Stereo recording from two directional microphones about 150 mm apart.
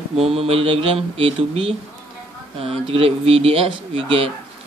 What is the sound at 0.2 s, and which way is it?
Speech, 40° right (ahead or behind).